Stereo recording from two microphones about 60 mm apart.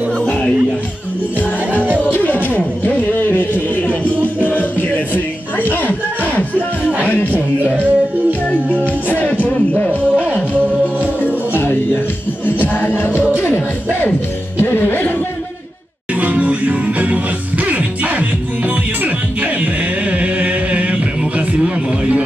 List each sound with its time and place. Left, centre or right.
0.2 s music: centre
2.0 s music: left
3.1 s a sound: left
4.4 s music: left
7.3 s music: right
11.2 s music: left
14.6 s music: left
16.2 s music: right
19.4 s chant: right